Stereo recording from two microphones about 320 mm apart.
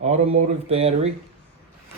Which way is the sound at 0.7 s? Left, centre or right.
Centre.